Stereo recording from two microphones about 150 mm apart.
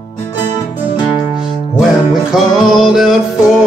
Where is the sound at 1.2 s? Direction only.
5° right (ahead or behind).